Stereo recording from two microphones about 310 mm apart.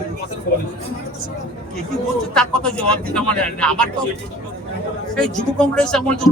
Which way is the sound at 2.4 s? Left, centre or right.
Centre.